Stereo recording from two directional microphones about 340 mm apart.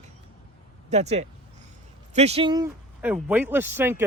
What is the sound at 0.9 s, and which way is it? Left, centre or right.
Speech, centre.